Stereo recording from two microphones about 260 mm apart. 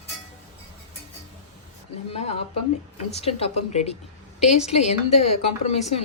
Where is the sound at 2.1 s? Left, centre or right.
Left.